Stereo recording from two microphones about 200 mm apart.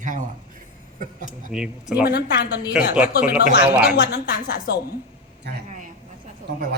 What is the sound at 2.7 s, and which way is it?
Speech, 5° right (ahead or behind).